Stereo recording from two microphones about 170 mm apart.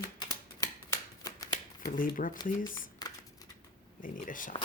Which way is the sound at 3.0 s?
25° left (ahead or behind).